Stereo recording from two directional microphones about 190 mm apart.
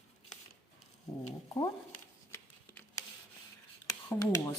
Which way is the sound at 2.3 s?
10° left (ahead or behind).